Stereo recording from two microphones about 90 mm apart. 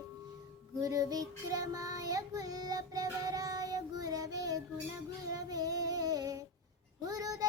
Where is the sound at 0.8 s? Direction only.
40° right (ahead or behind).